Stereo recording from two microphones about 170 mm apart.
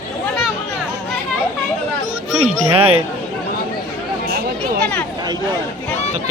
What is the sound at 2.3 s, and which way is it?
Music, centre (ahead or behind).